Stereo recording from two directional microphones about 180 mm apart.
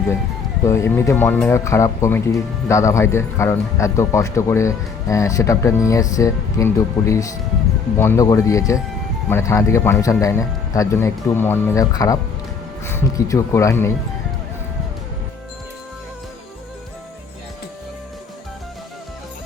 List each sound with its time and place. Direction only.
0.7 s speech: 15° left (ahead or behind)